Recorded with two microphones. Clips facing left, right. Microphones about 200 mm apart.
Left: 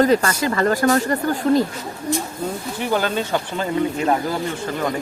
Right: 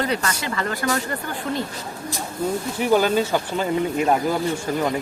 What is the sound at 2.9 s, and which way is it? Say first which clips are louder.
Speech: right 3 dB; 5° right (ahead or behind).